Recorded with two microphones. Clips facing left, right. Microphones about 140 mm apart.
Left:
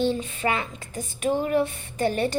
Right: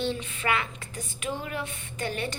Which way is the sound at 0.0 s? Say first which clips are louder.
Left 6 dB; 40° left (ahead or behind).